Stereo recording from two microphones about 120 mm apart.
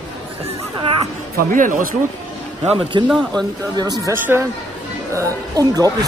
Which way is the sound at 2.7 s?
45° right (ahead or behind).